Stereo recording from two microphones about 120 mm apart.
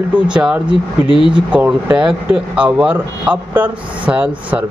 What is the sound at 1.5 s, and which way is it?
Speech, 10° right (ahead or behind).